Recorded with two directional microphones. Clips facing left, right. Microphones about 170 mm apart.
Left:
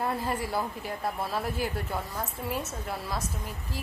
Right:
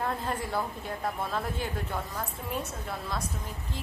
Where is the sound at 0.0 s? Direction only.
10° left (ahead or behind).